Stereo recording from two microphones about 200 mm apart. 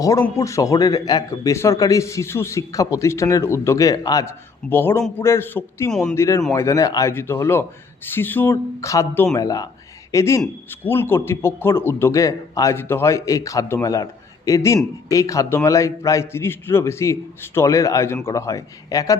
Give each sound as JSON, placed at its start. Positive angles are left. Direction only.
{"t": 0.0, "sound": "a man's voice", "side_deg": 15}